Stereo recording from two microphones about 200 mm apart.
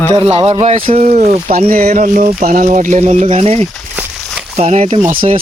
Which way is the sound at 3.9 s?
10° right (ahead or behind).